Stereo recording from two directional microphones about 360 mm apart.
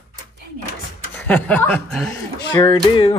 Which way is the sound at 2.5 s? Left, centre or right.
Centre.